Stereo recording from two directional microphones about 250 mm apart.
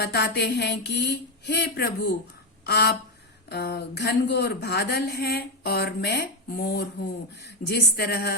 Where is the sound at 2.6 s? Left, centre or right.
Left.